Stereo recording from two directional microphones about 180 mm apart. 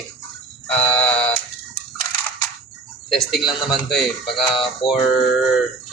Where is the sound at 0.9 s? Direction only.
10° left (ahead or behind).